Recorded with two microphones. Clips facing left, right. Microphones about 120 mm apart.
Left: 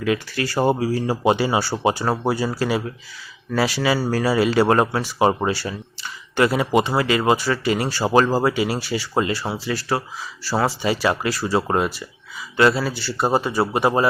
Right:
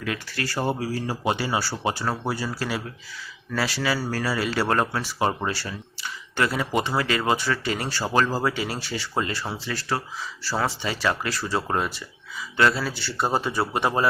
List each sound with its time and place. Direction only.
0.0 s speech: 20° left (ahead or behind)
2.0 s speech: 35° left (ahead or behind)
2.6 s speech: 20° left (ahead or behind); by 14.1 s 5° left (ahead or behind)